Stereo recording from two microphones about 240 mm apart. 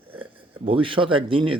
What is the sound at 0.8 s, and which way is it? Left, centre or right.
Speech, right.